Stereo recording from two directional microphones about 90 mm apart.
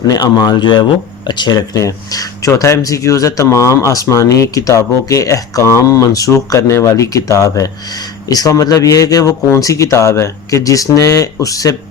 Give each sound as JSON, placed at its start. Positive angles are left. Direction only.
{"t": 0.2, "sound": "speech", "side_deg": 50}